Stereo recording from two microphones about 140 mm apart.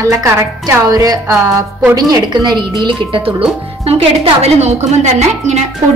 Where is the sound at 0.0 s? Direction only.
20° right (ahead or behind).